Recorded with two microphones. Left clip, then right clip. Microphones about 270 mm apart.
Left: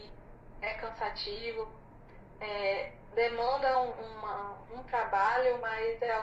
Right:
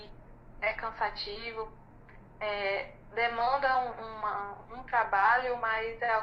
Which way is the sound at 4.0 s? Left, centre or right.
Right.